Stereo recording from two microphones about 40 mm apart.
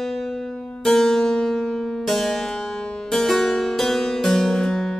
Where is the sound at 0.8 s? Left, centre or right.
Centre.